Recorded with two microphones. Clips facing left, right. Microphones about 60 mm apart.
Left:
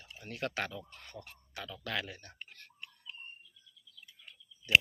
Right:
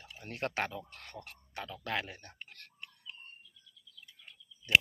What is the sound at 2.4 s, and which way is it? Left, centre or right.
Tick-tock, right.